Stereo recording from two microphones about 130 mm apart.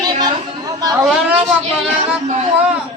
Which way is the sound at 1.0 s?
Centre (ahead or behind).